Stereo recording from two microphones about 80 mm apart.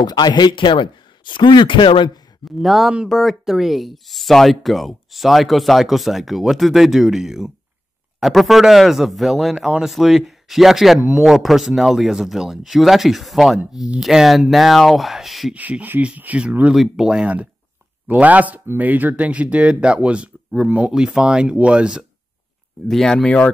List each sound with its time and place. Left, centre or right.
0.0 s speech: left
2.4 s speech: centre
15.5 s speech: centre
16.7 s speech: centre
22.8 s speech: centre